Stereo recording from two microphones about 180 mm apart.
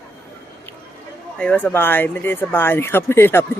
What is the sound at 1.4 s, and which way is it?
Speech, 5° left (ahead or behind).